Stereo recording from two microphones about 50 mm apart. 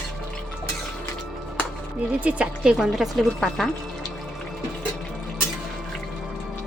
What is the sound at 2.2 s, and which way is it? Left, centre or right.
Speech, right.